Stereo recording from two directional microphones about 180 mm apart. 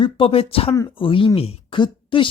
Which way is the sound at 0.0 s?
30° left (ahead or behind).